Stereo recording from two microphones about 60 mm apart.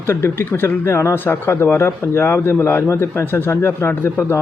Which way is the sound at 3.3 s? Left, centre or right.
Left.